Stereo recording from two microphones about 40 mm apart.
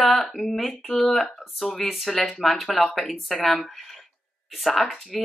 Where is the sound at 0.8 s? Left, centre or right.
Left.